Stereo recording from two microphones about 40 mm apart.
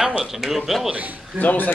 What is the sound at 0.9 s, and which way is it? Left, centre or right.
Speech, right.